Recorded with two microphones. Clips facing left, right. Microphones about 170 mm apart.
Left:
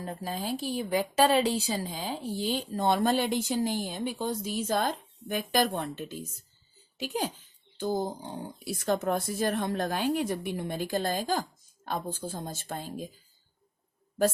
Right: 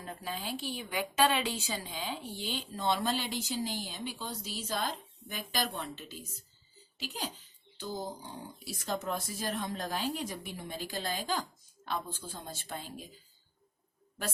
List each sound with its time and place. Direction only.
0.0 s a woman's voice: 35° left (ahead or behind)